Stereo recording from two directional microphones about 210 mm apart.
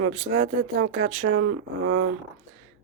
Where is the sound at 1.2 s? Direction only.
90° right.